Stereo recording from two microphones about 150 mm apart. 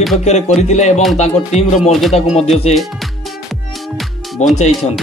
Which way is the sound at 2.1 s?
45° left (ahead or behind).